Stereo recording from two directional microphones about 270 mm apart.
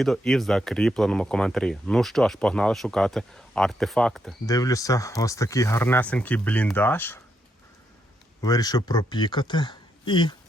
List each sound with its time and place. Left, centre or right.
0.0 s speech: centre
4.4 s speech: centre
8.4 s speech: centre